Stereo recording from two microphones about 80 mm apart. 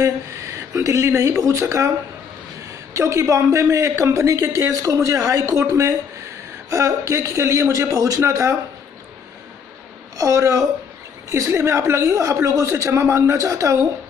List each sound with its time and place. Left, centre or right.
0.0 s speech: right
2.9 s a man's voice: right
10.1 s a man's voice: right